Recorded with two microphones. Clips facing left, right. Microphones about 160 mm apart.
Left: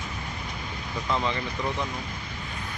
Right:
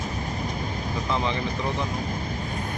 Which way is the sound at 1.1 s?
15° right (ahead or behind).